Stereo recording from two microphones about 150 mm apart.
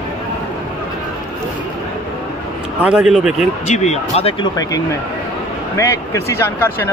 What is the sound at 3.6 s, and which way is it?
Speech, 50° left (ahead or behind).